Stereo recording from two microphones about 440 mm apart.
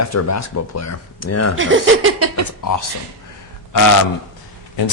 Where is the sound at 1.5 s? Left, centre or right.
Right.